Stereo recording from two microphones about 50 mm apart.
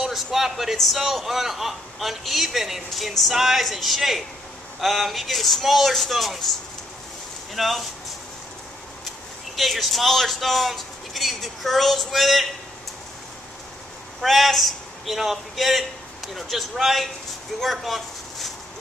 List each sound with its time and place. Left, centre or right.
0.0 s a sound: centre
0.7 s a man's voice: centre
7.5 s a man's voice: centre
9.6 s a man's voice: centre
14.2 s a man's voice: centre